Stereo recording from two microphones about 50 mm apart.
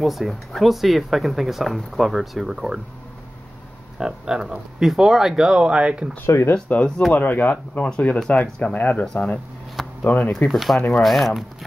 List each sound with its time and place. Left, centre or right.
0.0 s speech: centre
4.0 s speech: centre
6.2 s speech: left
7.2 s speech: left
7.8 s speech: left
9.0 s speech: centre
10.0 s speech: left
10.5 s speech: centre